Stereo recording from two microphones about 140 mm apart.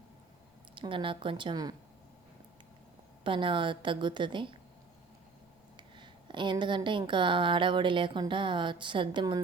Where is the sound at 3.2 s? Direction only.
35° right (ahead or behind).